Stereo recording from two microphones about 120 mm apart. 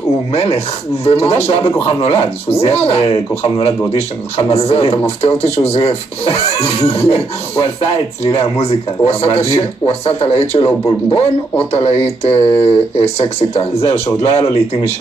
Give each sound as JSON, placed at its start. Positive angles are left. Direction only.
{"t": 0.3, "sound": "speech", "side_deg": 55}